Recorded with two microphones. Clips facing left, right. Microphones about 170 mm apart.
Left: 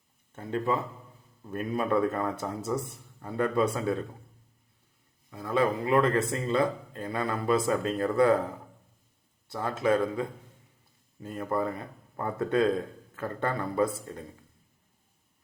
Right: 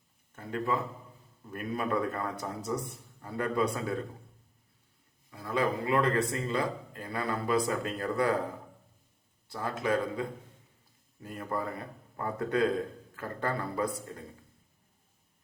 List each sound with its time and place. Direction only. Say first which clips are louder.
0.3 s speech: left 3 dB; 25° left (ahead or behind)
5.3 s speech: left 3 dB; 25° left (ahead or behind)
9.5 s speech: left 4 dB; 25° left (ahead or behind)